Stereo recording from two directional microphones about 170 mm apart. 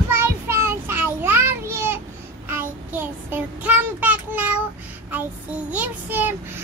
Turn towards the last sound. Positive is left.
turn(degrees=-10)  # may be behind; listen again after turning